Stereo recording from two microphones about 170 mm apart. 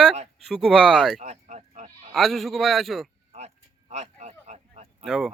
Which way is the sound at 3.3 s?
40° right (ahead or behind).